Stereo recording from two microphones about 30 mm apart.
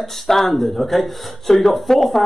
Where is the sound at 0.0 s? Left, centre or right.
Centre.